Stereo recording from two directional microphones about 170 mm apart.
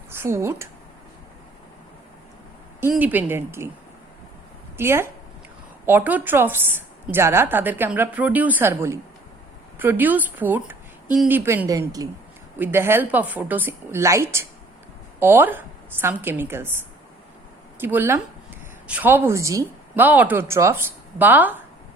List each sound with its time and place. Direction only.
0.1 s speech: 15° right (ahead or behind)
2.9 s speech: 10° right (ahead or behind)
4.8 s speech: 15° right (ahead or behind)